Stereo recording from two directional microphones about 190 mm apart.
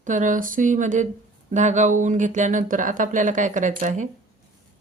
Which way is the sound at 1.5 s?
40° right (ahead or behind).